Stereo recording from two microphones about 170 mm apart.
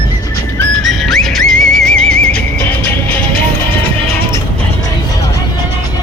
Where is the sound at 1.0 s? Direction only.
Centre (ahead or behind).